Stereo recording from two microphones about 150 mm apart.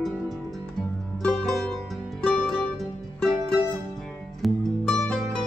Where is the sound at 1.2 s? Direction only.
5° left (ahead or behind).